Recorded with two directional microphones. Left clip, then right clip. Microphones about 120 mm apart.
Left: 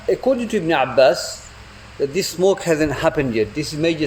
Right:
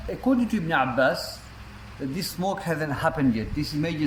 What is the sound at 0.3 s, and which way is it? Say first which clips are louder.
Speech: left 3 dB; 60° left (ahead or behind).